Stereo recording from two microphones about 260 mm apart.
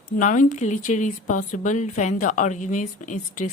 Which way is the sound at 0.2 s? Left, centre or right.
Left.